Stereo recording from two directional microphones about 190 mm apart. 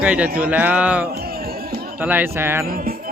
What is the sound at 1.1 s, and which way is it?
Music, 55° right (ahead or behind).